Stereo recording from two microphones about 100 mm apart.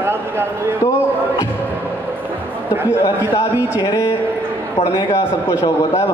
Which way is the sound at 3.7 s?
30° left (ahead or behind).